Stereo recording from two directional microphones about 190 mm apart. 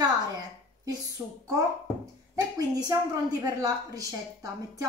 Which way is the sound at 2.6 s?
20° right (ahead or behind).